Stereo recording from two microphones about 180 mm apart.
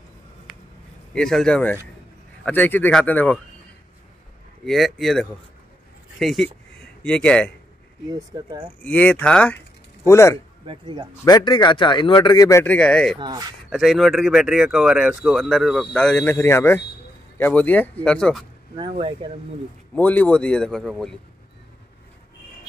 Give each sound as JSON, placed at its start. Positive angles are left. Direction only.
{"t": 1.1, "sound": "speech", "side_deg": 5}
{"t": 4.6, "sound": "a man's voice", "side_deg": 0}
{"t": 8.1, "sound": "speech", "side_deg": -20}
{"t": 8.8, "sound": "speech", "side_deg": 5}
{"t": 10.7, "sound": "speech", "side_deg": -25}
{"t": 11.2, "sound": "speech", "side_deg": 25}
{"t": 13.2, "sound": "speech", "side_deg": -25}
{"t": 13.7, "sound": "speech", "side_deg": 0}
{"t": 18.8, "sound": "speech", "side_deg": -30}
{"t": 20.0, "sound": "speech", "side_deg": 10}